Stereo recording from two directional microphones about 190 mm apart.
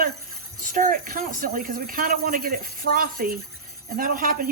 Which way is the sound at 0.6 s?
45° right (ahead or behind).